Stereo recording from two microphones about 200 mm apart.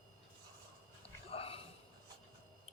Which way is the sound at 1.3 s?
30° left (ahead or behind).